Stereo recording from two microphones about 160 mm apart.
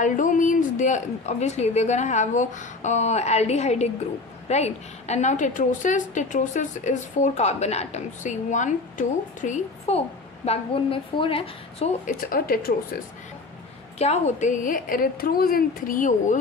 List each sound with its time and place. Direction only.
0.0 s a woman's voice: 55° left (ahead or behind); by 11.9 s 35° left (ahead or behind)
12.1 s a woman's voice: 65° left (ahead or behind)
13.9 s a woman's voice: 40° left (ahead or behind)